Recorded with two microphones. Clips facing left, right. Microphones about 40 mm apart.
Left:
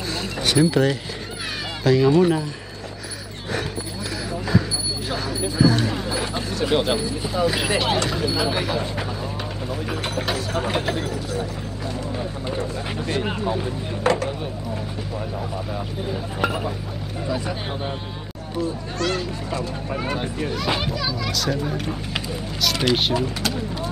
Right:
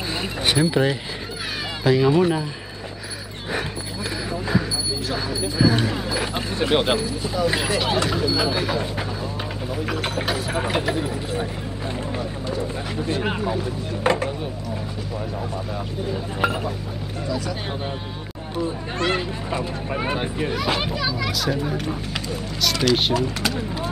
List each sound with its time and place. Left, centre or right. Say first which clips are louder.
0.1 s speech: left 1 dB; right
4.3 s a sound: left 1 dB; centre
5.6 s speech: left 1 dB; centre
6.2 s a sound: right 1 dB; centre
7.0 s speech: left 1 dB; centre
8.3 s speech: right 1 dB; centre
8.6 s speech: even; centre
13.2 s speech: even; centre
16.3 s speech: right 1 dB; centre
18.6 s speech: even; right
20.5 s speech: left 1 dB; centre
23.1 s speech: right 1 dB; centre